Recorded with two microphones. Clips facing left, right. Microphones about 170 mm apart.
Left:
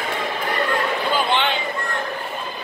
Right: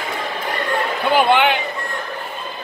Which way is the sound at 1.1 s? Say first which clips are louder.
Right 8 dB; 65° right (ahead or behind).